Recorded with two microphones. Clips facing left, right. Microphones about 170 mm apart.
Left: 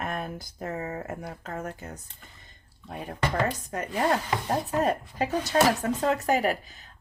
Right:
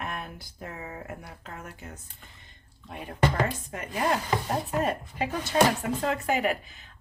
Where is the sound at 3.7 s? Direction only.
40° left (ahead or behind).